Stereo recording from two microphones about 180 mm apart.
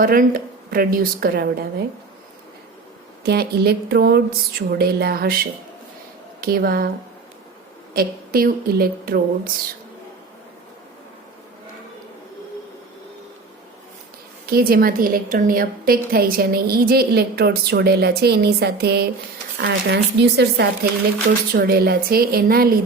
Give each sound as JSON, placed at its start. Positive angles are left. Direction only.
{"t": 0.0, "sound": "a woman's voice", "side_deg": -50}
{"t": 3.2, "sound": "a woman's voice", "side_deg": -60}
{"t": 7.9, "sound": "a woman's voice", "side_deg": -55}
{"t": 14.4, "sound": "a woman's voice", "side_deg": -55}